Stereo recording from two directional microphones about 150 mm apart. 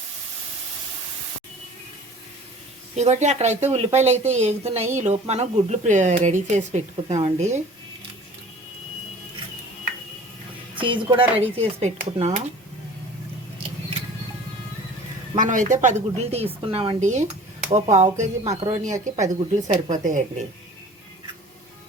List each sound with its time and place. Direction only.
2.9 s speech: 50° right (ahead or behind)
10.8 s a woman's voice: 35° right (ahead or behind); by 12.4 s 50° right (ahead or behind)
15.4 s a woman's voice: 55° right (ahead or behind)
16.6 s a woman's voice: 35° right (ahead or behind)
17.0 s a woman's voice: 50° right (ahead or behind)